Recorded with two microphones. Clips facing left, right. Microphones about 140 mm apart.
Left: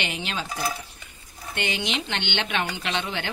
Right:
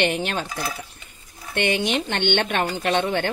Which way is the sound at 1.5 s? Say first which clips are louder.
Right 7 dB; 60° right (ahead or behind).